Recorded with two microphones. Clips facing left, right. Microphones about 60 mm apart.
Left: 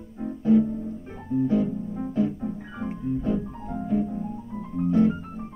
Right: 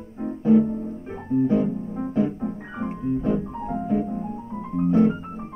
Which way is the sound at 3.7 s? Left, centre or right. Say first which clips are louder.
Right 1 dB; right.